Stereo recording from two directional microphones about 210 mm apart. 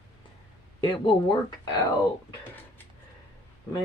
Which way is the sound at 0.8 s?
25° left (ahead or behind).